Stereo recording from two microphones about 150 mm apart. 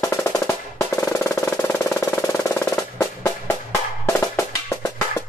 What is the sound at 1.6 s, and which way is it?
Music, 20° left (ahead or behind).